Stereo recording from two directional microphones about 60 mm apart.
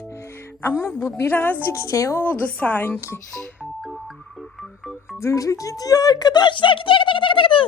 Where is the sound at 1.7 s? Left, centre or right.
Left.